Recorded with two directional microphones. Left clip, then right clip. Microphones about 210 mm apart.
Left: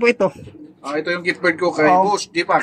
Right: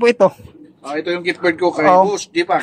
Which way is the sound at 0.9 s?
5° left (ahead or behind).